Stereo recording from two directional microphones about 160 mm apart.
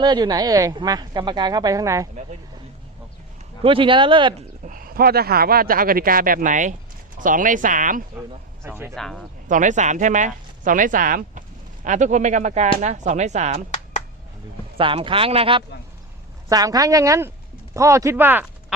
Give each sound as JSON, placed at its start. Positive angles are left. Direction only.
{"t": 0.0, "sound": "a woman's voice", "side_deg": -25}
{"t": 3.6, "sound": "speech", "side_deg": -35}
{"t": 4.6, "sound": "speech", "side_deg": -60}
{"t": 8.6, "sound": "speech", "side_deg": -15}
{"t": 9.0, "sound": "speech", "side_deg": 5}
{"t": 9.5, "sound": "speech", "side_deg": -50}
{"t": 14.8, "sound": "speech", "side_deg": -35}
{"t": 16.5, "sound": "a woman's voice", "side_deg": -25}